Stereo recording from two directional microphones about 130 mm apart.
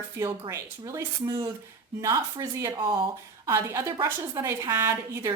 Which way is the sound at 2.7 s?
40° right (ahead or behind).